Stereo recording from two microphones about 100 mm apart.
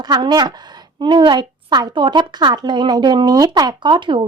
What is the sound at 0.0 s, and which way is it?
A woman's voice, 45° right (ahead or behind).